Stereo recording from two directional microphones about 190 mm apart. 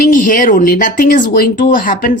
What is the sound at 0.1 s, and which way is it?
Speech, 45° left (ahead or behind).